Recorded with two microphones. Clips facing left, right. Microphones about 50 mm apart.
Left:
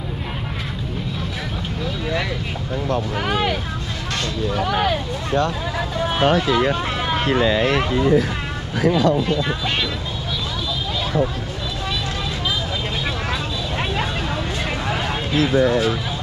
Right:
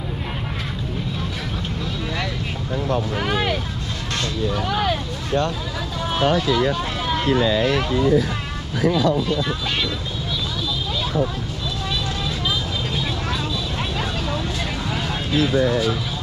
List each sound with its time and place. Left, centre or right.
2.9 s vehicle: centre
4.8 s speech: centre
7.4 s speech: left
7.7 s speech: left